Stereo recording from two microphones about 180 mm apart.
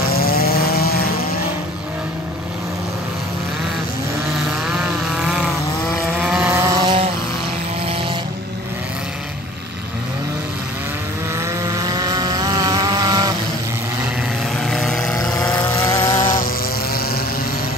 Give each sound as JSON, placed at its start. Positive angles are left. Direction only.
{"t": 0.4, "sound": "vehicle", "side_deg": 60}
{"t": 6.1, "sound": "vehicle", "side_deg": -5}
{"t": 6.7, "sound": "vehicle", "side_deg": -25}
{"t": 11.6, "sound": "vehicle", "side_deg": -20}
{"t": 14.7, "sound": "vehicle", "side_deg": 0}
{"t": 15.8, "sound": "a sound", "side_deg": 25}